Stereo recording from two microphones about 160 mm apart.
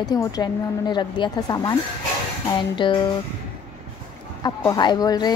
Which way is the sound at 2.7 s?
30° left (ahead or behind).